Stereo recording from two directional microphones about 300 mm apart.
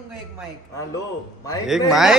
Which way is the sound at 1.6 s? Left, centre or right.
Centre.